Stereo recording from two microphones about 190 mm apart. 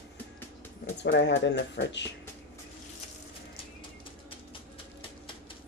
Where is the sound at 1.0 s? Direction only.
70° left (ahead or behind).